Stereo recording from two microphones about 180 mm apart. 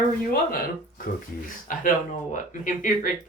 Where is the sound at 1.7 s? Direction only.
50° left (ahead or behind).